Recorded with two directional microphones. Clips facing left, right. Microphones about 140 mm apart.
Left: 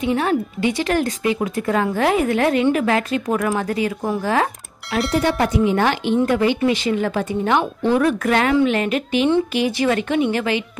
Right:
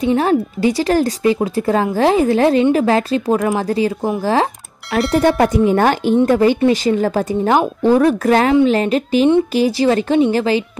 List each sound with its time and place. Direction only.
0.0 s speech: 35° right (ahead or behind)
4.9 s speech: centre (ahead or behind)
5.2 s speech: 45° right (ahead or behind)